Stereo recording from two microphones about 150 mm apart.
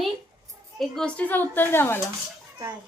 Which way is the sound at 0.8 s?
5° left (ahead or behind).